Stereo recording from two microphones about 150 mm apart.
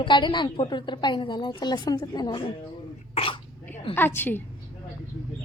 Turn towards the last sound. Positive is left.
turn(degrees=15)  # may be behind; listen again after turning